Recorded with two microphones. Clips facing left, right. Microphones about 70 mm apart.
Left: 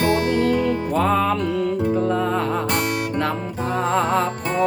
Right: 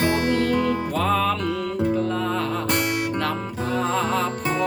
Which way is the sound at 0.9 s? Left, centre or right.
Centre.